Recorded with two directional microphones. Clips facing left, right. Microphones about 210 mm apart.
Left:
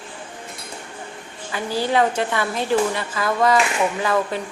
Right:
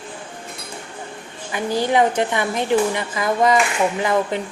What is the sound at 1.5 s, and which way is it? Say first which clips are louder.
Speech: right 2 dB; 15° right (ahead or behind).